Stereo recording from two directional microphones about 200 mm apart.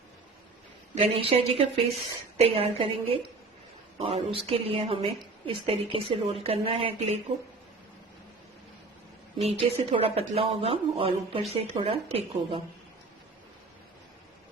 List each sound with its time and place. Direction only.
0.9 s a woman's voice: 30° right (ahead or behind)
9.4 s a woman's voice: 30° right (ahead or behind)